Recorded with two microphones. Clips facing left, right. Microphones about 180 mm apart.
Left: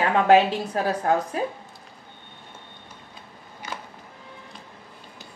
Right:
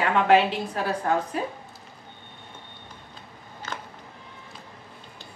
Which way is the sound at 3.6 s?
15° left (ahead or behind).